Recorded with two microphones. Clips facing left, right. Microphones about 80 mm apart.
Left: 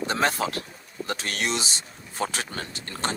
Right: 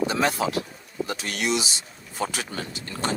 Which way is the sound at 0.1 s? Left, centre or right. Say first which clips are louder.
Right 1 dB; left.